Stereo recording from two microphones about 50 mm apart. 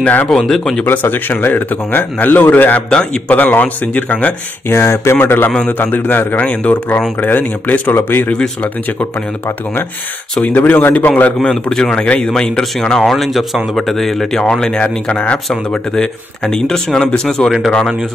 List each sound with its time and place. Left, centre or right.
0.0 s speech: left
0.3 s speech: centre
0.8 s speech: left
2.9 s a man's voice: centre
3.3 s speech: left
4.6 s speech: left
5.2 s speech: left
10.4 s speech: left
11.3 s speech: centre
13.0 s speech: centre